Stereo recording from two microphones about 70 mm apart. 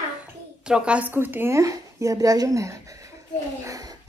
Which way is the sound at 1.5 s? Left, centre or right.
Right.